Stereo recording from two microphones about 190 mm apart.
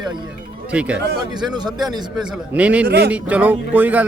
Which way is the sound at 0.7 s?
5° right (ahead or behind).